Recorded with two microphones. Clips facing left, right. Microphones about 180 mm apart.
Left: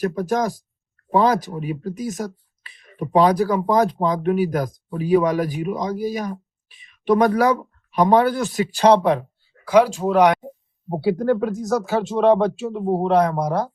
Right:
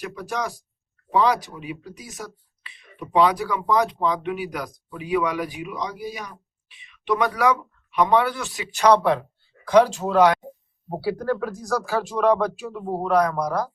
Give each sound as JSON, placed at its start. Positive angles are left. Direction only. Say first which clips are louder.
{"t": 0.0, "sound": "speech", "louder": "left 8 dB", "side_deg": 40}
{"t": 9.6, "sound": "speech", "louder": "left 1 dB", "side_deg": 10}